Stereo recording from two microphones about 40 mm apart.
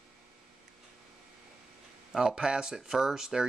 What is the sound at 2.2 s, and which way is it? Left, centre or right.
Speech, centre.